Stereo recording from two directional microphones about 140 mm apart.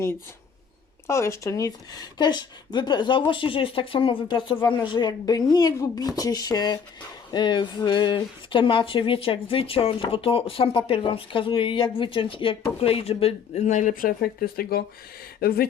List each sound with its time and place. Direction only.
1.0 s speech: 20° left (ahead or behind); by 15.7 s 90° left